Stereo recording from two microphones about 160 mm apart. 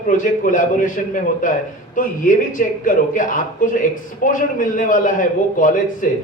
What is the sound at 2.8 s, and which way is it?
A man's voice, 55° left (ahead or behind).